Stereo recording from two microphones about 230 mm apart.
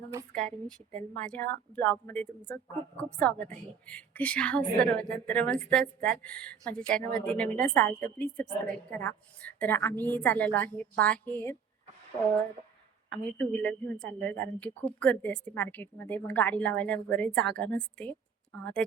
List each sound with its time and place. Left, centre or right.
0.3 s a woman's voice: right
0.9 s a woman's voice: centre
13.1 s a woman's voice: centre